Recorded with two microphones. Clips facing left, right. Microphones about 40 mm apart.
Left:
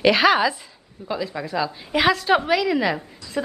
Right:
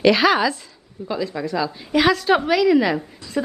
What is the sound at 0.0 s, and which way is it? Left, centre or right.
A woman's voice, centre.